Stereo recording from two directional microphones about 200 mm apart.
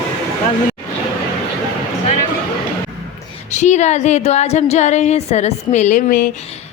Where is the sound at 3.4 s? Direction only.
35° left (ahead or behind).